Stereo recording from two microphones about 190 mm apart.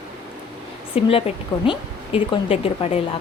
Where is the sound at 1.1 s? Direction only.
30° left (ahead or behind).